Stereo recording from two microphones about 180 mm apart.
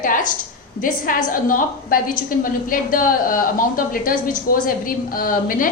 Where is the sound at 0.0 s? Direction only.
45° left (ahead or behind).